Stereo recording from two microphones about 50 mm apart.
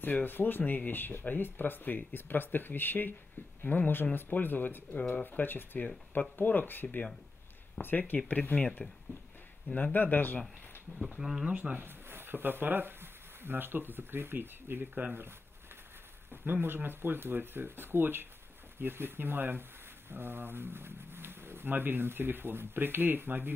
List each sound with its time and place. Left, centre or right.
0.0 s speech: left
9.9 s speech: left
11.1 s speech: centre
11.5 s speech: right
11.8 s speech: right
16.6 s speech: right